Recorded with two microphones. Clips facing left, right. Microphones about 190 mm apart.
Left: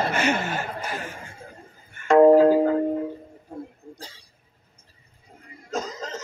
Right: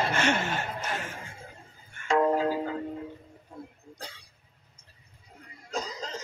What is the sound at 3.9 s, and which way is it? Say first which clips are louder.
Cough: left 1 dB; 60° right (ahead or behind).